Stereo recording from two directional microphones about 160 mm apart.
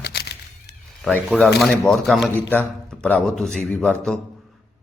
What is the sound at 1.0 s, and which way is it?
A man's voice, centre (ahead or behind).